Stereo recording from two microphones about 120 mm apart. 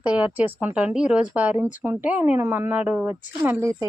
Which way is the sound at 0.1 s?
10° right (ahead or behind).